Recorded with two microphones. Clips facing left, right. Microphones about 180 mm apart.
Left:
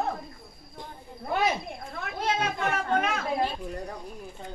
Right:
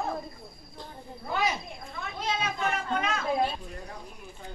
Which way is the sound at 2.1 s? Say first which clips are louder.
Left 3 dB; 60° left (ahead or behind).